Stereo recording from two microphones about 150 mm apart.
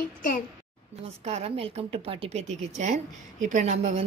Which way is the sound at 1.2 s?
45° right (ahead or behind).